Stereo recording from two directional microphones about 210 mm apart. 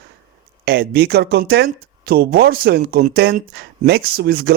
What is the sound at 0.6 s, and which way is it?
Speech, 50° right (ahead or behind).